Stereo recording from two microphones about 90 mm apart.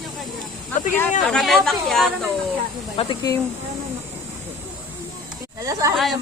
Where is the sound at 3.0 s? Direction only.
90° left.